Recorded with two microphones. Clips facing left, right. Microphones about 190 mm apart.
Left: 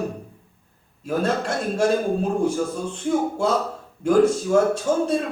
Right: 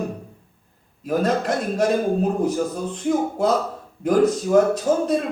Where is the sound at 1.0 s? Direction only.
30° left (ahead or behind).